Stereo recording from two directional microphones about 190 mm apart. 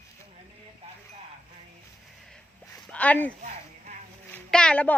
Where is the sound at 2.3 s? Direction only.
5° left (ahead or behind).